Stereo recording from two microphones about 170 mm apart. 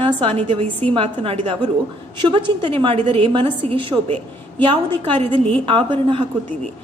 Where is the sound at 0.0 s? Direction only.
35° right (ahead or behind).